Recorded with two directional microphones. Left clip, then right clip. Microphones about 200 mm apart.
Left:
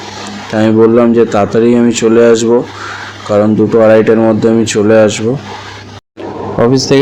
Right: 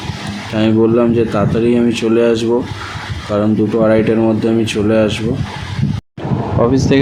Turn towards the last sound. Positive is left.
turn(degrees=20)  # may be behind; listen again after turning